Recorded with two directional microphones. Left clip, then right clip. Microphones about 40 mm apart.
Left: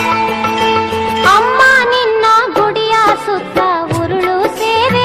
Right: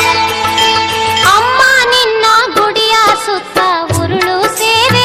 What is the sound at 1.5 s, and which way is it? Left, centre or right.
Music of bollywood, right.